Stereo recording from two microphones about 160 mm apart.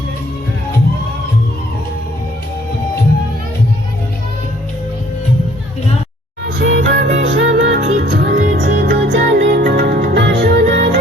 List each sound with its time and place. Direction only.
6.6 s music: 90° right